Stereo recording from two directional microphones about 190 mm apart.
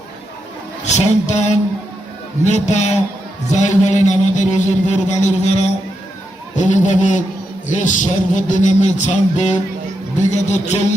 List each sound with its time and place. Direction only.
0.9 s a man's voice: 40° left (ahead or behind)